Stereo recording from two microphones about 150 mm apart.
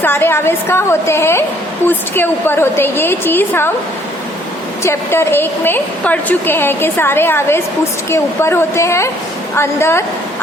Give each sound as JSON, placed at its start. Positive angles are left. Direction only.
{"t": 0.0, "sound": "a woman's voice", "side_deg": 15}
{"t": 4.8, "sound": "a woman's voice", "side_deg": 15}